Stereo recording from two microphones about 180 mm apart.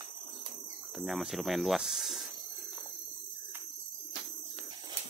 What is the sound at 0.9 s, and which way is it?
Speech, centre (ahead or behind).